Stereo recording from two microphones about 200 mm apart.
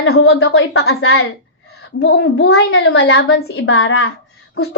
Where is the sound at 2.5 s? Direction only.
90° left.